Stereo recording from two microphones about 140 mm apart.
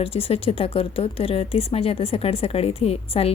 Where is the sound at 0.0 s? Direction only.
45° left (ahead or behind).